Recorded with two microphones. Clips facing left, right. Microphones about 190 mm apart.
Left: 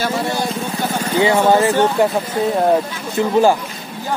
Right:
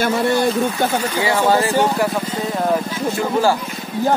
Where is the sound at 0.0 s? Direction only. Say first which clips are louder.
Right 3 dB; 55° right (ahead or behind).